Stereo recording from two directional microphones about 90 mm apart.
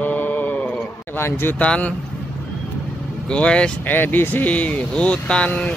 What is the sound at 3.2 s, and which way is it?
Speech, 10° left (ahead or behind).